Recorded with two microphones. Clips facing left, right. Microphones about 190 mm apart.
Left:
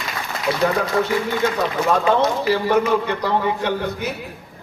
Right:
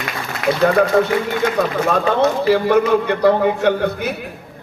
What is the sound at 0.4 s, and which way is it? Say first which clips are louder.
Speech: right 4 dB; 65° right (ahead or behind).